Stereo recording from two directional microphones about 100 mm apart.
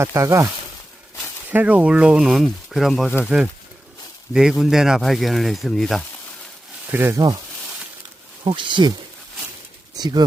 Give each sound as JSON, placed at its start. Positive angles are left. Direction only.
{"t": 0.0, "sound": "speech", "side_deg": -30}
{"t": 1.5, "sound": "speech", "side_deg": -15}
{"t": 6.8, "sound": "speech", "side_deg": -20}
{"t": 8.4, "sound": "speech", "side_deg": -55}
{"t": 9.9, "sound": "speech", "side_deg": -40}